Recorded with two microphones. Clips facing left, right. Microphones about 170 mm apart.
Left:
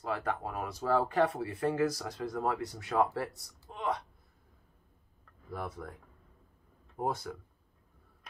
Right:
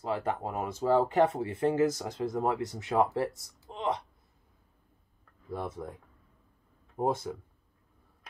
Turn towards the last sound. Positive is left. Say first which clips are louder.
# right 5 dB
turn(degrees=-25)  # may be behind; listen again after turning